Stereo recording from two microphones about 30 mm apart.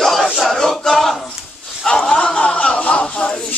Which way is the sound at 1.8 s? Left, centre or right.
Left.